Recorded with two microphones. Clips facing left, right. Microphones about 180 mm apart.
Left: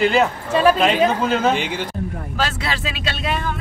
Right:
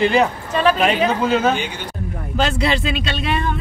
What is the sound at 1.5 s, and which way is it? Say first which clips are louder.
Speech: left 2 dB; 90° left.